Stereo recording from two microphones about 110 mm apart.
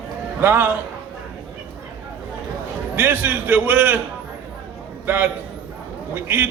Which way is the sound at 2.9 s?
15° right (ahead or behind).